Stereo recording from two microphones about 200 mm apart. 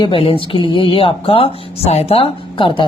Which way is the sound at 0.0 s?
25° left (ahead or behind).